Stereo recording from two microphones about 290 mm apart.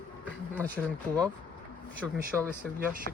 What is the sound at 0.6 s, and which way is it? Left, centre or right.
Speech, centre.